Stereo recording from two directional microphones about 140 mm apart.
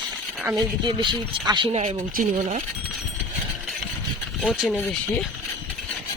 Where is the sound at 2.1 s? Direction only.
65° right (ahead or behind).